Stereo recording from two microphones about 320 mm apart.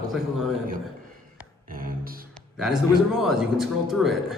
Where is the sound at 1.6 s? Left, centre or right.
Right.